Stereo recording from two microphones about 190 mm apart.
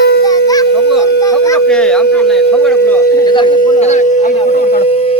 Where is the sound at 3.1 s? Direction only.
25° left (ahead or behind).